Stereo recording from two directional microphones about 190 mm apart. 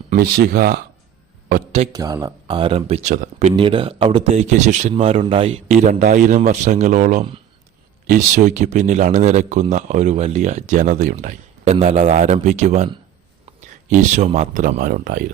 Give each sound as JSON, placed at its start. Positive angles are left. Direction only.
{"t": 0.1, "sound": "speech", "side_deg": -50}
{"t": 1.9, "sound": "speech", "side_deg": -20}
{"t": 3.5, "sound": "speech", "side_deg": -25}